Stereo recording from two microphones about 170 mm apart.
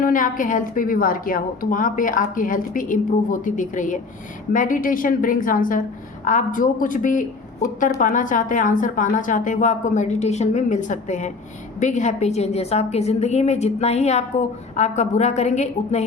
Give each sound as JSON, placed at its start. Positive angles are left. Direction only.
{"t": 0.0, "sound": "a woman's voice", "side_deg": 50}